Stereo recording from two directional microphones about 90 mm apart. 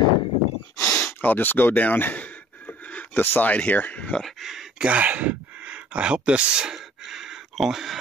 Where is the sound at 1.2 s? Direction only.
20° left (ahead or behind).